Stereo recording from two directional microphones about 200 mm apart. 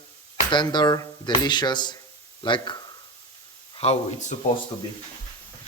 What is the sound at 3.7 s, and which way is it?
Speech, 30° left (ahead or behind).